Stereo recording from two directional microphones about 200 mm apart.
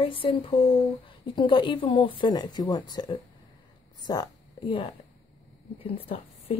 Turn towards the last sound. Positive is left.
turn(degrees=30)  # may be behind; listen again after turning